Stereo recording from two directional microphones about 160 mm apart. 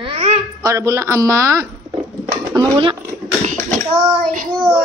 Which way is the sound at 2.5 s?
30° right (ahead or behind).